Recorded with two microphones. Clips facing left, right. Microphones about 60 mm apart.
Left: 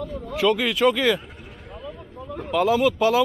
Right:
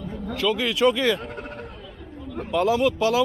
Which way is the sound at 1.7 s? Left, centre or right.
Left.